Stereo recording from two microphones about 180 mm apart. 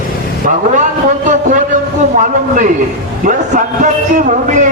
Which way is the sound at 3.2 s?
50° right (ahead or behind).